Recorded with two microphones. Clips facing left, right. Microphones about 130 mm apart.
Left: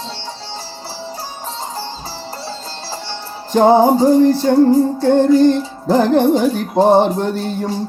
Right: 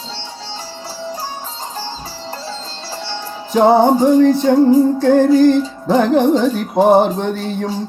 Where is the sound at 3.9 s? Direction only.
40° left (ahead or behind).